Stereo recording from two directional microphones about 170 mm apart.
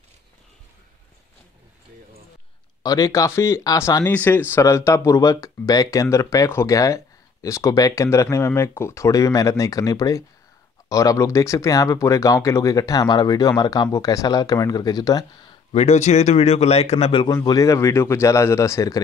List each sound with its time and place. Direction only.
2.8 s speech: 20° left (ahead or behind)
15.7 s speech: 40° left (ahead or behind)
17.4 s speech: 20° left (ahead or behind)